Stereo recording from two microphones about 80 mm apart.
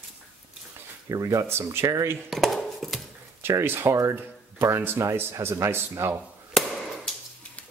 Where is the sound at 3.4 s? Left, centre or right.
Right.